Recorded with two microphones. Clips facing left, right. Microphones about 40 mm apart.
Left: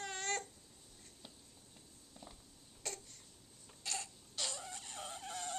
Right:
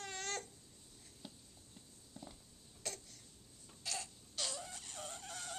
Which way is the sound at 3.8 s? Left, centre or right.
Centre.